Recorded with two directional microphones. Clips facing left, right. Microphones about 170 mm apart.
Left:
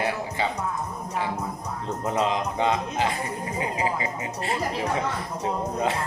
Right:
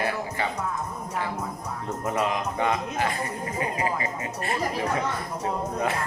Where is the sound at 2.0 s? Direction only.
20° left (ahead or behind).